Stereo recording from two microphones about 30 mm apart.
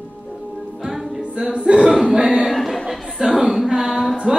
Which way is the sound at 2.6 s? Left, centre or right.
Centre.